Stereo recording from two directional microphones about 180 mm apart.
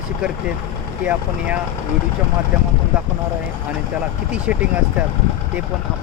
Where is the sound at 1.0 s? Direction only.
10° right (ahead or behind).